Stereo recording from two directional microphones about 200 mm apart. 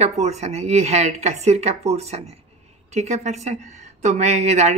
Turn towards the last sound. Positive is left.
turn(degrees=-35)  # may be behind; listen again after turning